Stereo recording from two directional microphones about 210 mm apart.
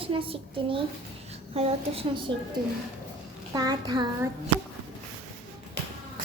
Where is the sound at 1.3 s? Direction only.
30° right (ahead or behind).